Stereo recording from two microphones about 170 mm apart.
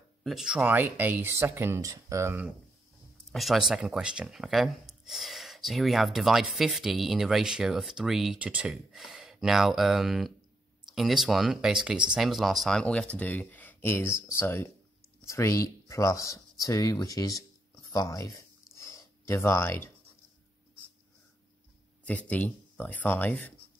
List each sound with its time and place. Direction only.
0.2 s speech: centre (ahead or behind)
3.3 s speech: centre (ahead or behind); by 18.3 s 20° left (ahead or behind)
18.8 s a sound: 20° left (ahead or behind)
22.0 s speech: 10° left (ahead or behind)